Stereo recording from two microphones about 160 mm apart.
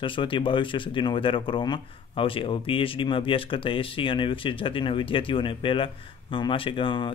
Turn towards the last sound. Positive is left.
turn(degrees=30)  # may be behind; listen again after turning